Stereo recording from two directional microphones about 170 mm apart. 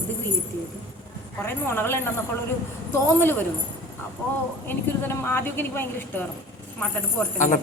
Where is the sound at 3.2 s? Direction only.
10° left (ahead or behind).